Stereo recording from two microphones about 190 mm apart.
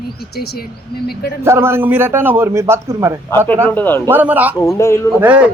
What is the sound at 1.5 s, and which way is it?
A man's voice, 15° right (ahead or behind).